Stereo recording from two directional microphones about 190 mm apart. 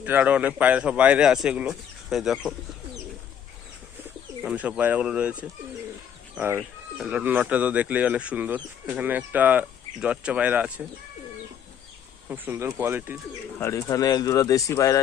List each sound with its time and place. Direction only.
0.0 s speech: 10° right (ahead or behind)
4.4 s speech: 5° right (ahead or behind)
12.3 s speech: 15° right (ahead or behind)
13.6 s speech: 15° left (ahead or behind)